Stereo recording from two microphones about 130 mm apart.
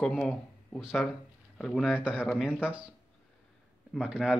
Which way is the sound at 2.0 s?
10° right (ahead or behind).